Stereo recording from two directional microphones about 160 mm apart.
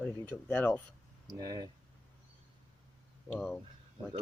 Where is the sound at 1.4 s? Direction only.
25° right (ahead or behind).